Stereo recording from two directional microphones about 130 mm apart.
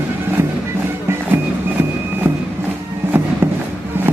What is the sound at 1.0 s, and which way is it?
Music, 20° right (ahead or behind).